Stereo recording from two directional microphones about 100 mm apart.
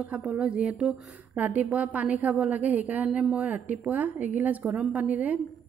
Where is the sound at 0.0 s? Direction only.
10° right (ahead or behind).